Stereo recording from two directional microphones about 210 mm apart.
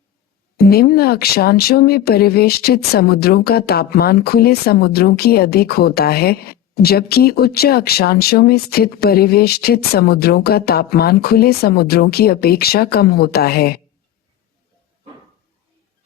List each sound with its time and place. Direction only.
0.5 s speech: 45° left (ahead or behind)